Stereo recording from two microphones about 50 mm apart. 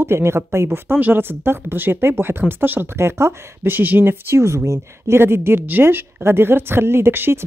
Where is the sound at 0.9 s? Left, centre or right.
Right.